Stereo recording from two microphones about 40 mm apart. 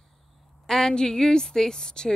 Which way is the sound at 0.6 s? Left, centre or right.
Centre.